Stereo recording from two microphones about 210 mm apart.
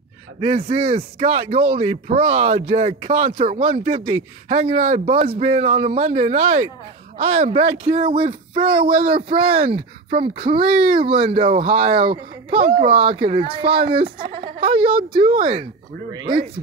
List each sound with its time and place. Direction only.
0.4 s speech: 25° right (ahead or behind)
8.7 s speech: 45° right (ahead or behind)
9.3 s speech: 25° right (ahead or behind)
14.0 s speech: 45° right (ahead or behind)
14.6 s speech: 25° right (ahead or behind)
16.1 s speech: 20° right (ahead or behind)